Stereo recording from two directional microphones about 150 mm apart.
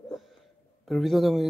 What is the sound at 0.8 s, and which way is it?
Speech, centre (ahead or behind).